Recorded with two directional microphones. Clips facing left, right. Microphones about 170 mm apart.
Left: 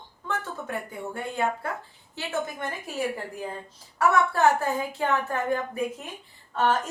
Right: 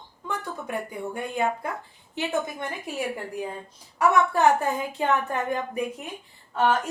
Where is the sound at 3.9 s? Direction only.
15° right (ahead or behind).